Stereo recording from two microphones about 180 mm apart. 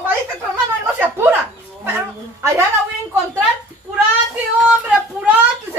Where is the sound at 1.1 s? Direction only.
10° right (ahead or behind).